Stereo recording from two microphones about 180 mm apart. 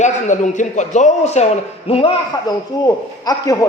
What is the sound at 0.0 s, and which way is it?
A man's voice, 45° left (ahead or behind).